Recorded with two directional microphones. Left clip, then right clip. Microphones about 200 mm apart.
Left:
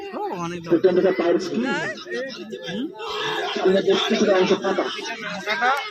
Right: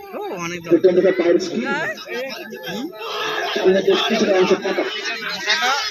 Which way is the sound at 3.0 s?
70° left (ahead or behind).